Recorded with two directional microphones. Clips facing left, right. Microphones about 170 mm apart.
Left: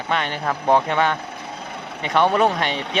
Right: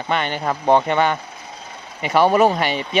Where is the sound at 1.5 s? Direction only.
65° left (ahead or behind).